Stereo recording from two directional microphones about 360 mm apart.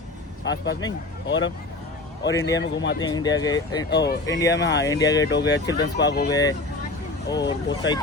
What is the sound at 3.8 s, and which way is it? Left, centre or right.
Speech, left.